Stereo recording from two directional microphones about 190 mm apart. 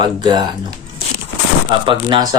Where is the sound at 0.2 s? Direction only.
25° right (ahead or behind).